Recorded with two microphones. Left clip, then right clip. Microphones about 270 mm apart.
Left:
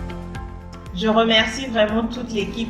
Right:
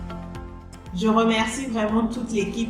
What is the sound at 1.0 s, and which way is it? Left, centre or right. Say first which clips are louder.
A woman's voice: left 4 dB; right.